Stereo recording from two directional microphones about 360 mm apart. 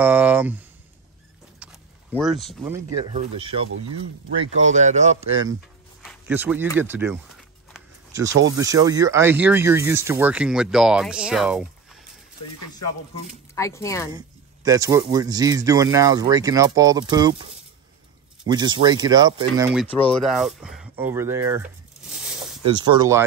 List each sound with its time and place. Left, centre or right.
0.0 s speech: centre
1.6 s speech: centre
6.0 s speech: centre
7.7 s a sound: centre
8.5 s speech: centre
13.6 s speech: centre
14.1 s speech: centre
18.5 s speech: centre
22.8 s speech: centre